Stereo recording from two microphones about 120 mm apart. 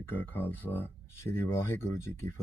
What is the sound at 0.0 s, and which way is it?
Speech, 15° left (ahead or behind).